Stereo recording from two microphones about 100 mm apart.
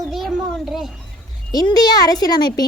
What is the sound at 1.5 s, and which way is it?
Speech, 40° left (ahead or behind).